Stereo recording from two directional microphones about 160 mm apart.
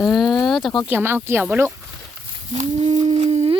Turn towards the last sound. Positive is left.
turn(degrees=-40)  # may be behind; listen again after turning